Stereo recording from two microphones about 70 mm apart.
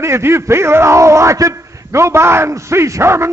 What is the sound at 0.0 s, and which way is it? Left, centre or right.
Speech, right.